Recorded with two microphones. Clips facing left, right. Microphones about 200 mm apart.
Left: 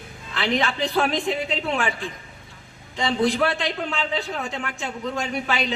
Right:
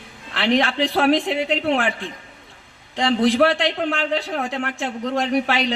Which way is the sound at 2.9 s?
90° right.